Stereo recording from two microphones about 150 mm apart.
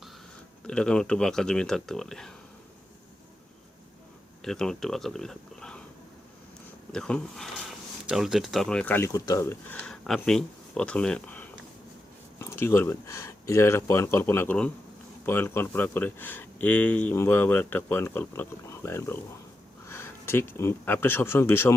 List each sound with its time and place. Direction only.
0.7 s speech: 5° left (ahead or behind)
4.4 s speech: 5° left (ahead or behind)
6.9 s speech: 5° left (ahead or behind)